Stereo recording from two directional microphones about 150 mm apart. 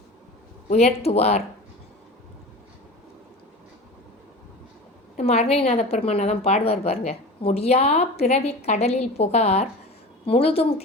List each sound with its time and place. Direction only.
0.7 s a woman's voice: 45° left (ahead or behind)
5.1 s a woman's voice: 45° left (ahead or behind)